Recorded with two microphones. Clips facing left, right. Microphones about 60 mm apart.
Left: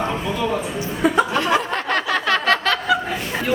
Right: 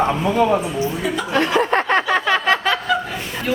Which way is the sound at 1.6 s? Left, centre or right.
Right.